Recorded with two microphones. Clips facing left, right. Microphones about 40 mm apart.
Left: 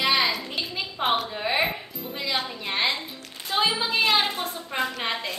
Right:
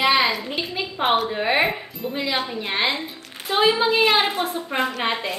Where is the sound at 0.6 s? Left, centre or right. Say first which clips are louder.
Right 4 dB; centre.